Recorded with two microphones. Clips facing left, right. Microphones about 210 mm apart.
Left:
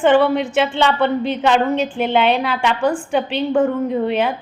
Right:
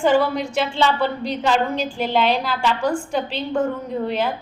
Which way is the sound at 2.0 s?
60° left (ahead or behind).